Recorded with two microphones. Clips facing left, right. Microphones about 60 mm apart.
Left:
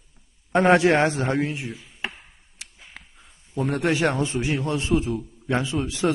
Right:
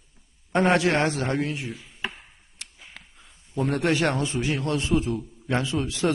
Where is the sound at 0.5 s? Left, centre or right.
Centre.